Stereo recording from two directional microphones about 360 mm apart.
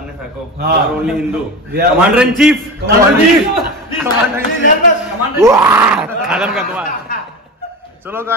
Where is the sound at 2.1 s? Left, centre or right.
Centre.